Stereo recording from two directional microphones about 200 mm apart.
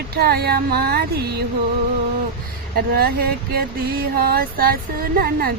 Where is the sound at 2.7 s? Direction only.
50° right (ahead or behind).